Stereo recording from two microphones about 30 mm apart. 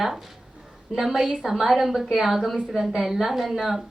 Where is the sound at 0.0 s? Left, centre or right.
Centre.